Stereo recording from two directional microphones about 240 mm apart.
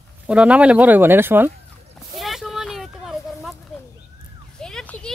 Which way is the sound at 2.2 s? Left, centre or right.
Centre.